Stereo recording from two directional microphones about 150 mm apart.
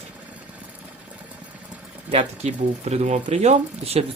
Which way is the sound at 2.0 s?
45° right (ahead or behind).